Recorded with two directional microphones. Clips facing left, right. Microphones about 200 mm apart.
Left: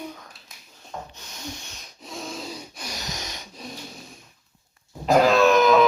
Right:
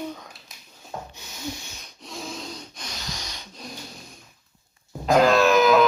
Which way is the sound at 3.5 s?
5° left (ahead or behind).